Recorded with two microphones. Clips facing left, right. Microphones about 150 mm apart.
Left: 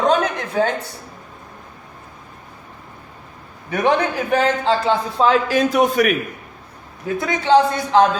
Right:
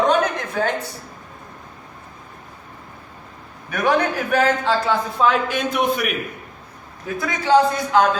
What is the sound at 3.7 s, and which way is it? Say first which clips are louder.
A man's voice: left 1 dB; 25° left (ahead or behind).